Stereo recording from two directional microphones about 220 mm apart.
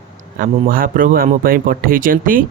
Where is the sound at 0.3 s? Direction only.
40° right (ahead or behind).